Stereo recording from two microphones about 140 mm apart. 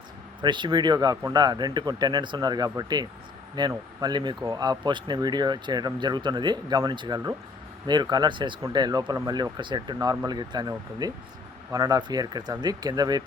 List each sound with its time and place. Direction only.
0.4 s speech: 35° right (ahead or behind)